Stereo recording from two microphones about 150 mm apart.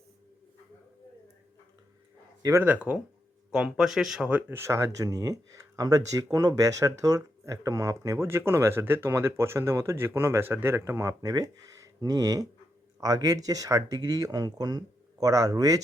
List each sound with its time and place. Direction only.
2.4 s speech: 15° right (ahead or behind)